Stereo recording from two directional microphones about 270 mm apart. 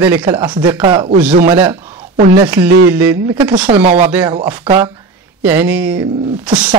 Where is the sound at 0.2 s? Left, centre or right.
Centre.